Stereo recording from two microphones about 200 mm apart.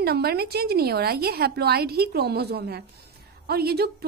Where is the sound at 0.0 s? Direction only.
50° right (ahead or behind).